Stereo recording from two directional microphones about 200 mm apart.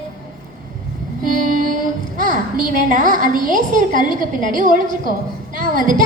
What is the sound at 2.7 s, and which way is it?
A woman's voice, 40° right (ahead or behind).